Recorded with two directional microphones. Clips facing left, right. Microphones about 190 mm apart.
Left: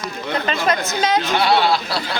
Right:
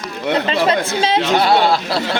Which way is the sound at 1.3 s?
45° right (ahead or behind).